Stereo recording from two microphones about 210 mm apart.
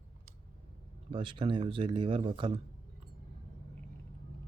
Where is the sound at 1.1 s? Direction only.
25° right (ahead or behind).